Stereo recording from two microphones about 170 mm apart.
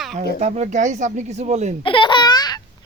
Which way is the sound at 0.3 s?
40° right (ahead or behind).